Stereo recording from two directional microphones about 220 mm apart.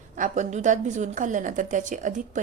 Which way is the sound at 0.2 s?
35° right (ahead or behind).